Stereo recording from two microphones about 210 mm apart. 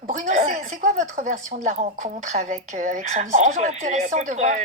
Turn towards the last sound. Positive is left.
turn(degrees=-35)  # may be behind; listen again after turning